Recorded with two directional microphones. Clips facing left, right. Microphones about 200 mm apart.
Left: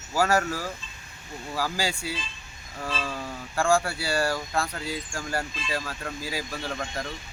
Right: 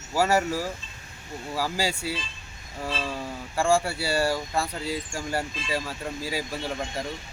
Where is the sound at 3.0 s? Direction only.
5° right (ahead or behind).